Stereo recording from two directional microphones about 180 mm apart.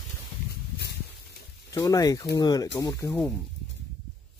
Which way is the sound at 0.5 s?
65° left (ahead or behind).